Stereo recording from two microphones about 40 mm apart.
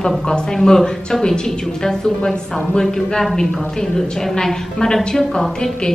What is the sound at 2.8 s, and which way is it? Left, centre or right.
A woman's voice, centre.